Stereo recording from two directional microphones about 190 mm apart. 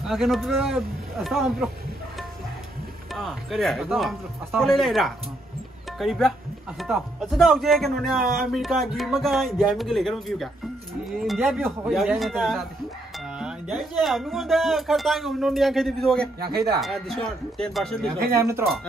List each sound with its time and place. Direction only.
0.0 s speech: centre (ahead or behind)
3.2 s speech: centre (ahead or behind)
8.2 s speech: 50° right (ahead or behind)
8.5 s speech: centre (ahead or behind)
16.4 s speech: 20° right (ahead or behind)
16.8 s speech: centre (ahead or behind)
18.3 s speech: 15° right (ahead or behind)